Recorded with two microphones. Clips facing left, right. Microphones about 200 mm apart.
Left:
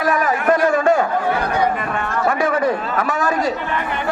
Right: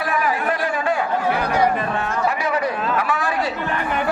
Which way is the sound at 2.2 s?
50° left (ahead or behind).